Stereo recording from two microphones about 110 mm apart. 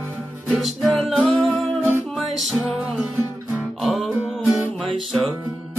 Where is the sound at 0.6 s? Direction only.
Centre (ahead or behind).